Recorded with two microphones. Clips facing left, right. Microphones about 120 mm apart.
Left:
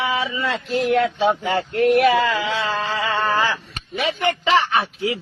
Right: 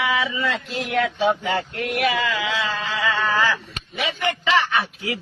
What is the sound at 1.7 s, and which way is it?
Speech, 35° left (ahead or behind).